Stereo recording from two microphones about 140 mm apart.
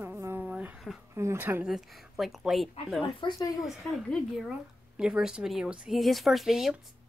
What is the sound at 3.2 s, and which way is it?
Speech, 35° left (ahead or behind).